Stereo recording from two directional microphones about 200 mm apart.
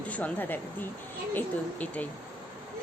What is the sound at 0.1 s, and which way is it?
A woman's voice, 10° left (ahead or behind).